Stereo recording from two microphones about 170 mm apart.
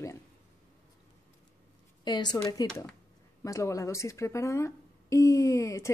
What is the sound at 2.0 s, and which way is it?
A woman's voice, 25° left (ahead or behind).